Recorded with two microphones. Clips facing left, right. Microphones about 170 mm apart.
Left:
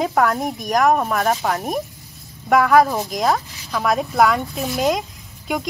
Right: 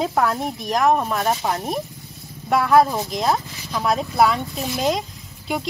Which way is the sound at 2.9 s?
Centre (ahead or behind).